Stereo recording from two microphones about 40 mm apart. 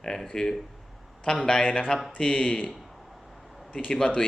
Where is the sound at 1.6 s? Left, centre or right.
Left.